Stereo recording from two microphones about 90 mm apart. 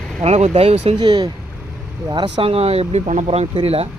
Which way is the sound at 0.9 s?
50° right (ahead or behind).